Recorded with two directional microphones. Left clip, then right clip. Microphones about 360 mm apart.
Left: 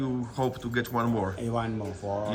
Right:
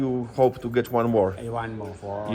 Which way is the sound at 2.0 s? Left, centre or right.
Left.